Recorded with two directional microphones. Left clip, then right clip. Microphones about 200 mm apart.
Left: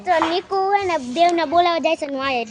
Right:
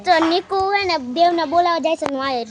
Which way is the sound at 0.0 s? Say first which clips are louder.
Right 3 dB; 40° right (ahead or behind).